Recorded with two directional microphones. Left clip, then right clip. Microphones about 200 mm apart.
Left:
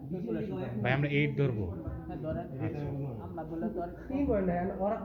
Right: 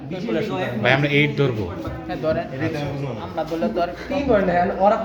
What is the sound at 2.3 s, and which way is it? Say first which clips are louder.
Speech: right 16 dB; 35° right (ahead or behind).